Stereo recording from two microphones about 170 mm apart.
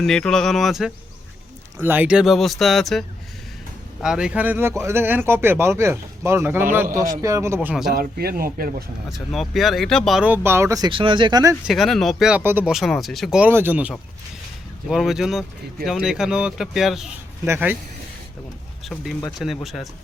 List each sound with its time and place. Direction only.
0.0 s speech: 5° left (ahead or behind)
4.0 s speech: 5° right (ahead or behind)
7.9 s speech: 60° right (ahead or behind)
9.1 s speech: centre (ahead or behind); by 11.5 s 25° right (ahead or behind)
11.6 s speech: centre (ahead or behind)
17.4 s speech: 10° right (ahead or behind)
19.6 s speech: centre (ahead or behind)